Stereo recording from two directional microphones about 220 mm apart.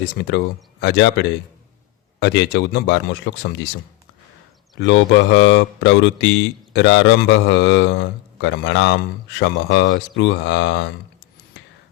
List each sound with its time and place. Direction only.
0.2 s speech: 50° left (ahead or behind)
4.8 s speech: 55° left (ahead or behind)